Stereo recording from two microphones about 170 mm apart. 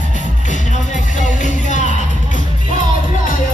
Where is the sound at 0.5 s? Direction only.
45° left (ahead or behind).